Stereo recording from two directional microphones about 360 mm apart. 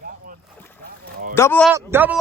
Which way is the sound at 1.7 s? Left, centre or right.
Centre.